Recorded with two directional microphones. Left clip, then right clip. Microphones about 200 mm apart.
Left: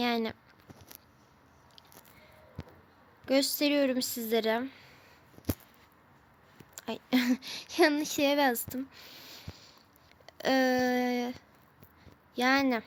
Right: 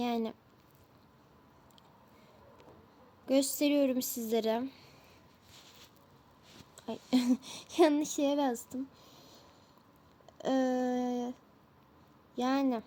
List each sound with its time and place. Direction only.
0.0 s speech: 5° left (ahead or behind)
3.2 s speech: centre (ahead or behind)
6.8 s speech: 5° left (ahead or behind)
8.2 s speech: 40° left (ahead or behind)
9.0 s a sound: 10° left (ahead or behind)
10.2 s speech: 40° left (ahead or behind)
12.3 s speech: 5° left (ahead or behind)